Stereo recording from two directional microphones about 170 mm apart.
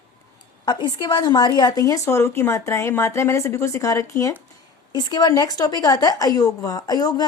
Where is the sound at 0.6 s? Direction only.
25° left (ahead or behind).